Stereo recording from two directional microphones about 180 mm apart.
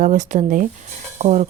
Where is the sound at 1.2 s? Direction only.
40° right (ahead or behind).